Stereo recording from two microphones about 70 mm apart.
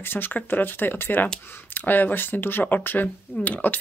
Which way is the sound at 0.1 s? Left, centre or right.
Left.